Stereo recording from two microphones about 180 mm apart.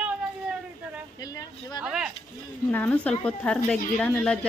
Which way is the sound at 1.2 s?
20° left (ahead or behind).